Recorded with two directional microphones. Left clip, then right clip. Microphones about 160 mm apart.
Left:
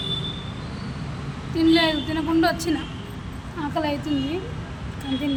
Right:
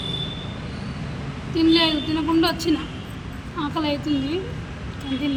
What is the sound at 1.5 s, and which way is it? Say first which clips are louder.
A woman's voice: right 1 dB; 20° left (ahead or behind).